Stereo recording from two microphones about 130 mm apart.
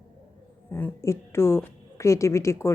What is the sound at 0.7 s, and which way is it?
A woman's voice, 15° left (ahead or behind).